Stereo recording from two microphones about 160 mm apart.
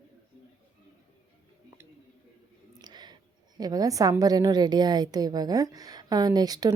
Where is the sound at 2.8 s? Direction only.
25° right (ahead or behind).